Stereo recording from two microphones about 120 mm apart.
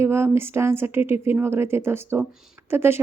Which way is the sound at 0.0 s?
20° right (ahead or behind).